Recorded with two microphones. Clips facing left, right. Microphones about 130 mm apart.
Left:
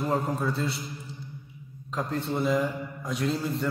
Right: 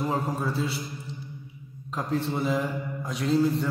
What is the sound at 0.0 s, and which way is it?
Speech, centre (ahead or behind).